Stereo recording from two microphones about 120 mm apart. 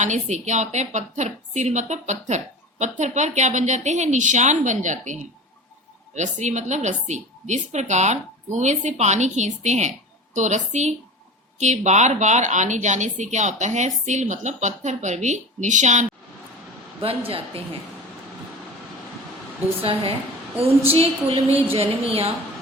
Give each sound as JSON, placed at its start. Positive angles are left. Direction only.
{"t": 0.0, "sound": "a woman's voice", "side_deg": -80}
{"t": 6.1, "sound": "a woman's voice", "side_deg": -80}
{"t": 17.0, "sound": "a woman's voice", "side_deg": -50}
{"t": 19.8, "sound": "a woman's voice", "side_deg": -50}